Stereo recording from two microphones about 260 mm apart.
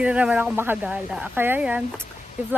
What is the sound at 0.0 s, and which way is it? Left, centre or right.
Speech, centre.